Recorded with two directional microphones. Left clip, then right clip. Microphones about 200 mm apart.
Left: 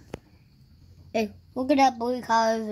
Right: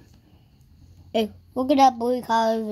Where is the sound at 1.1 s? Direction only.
Centre (ahead or behind).